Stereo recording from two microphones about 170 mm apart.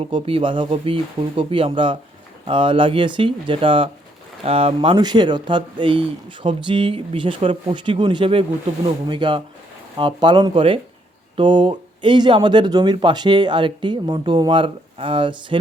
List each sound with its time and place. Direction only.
0.0 s speech: 30° right (ahead or behind)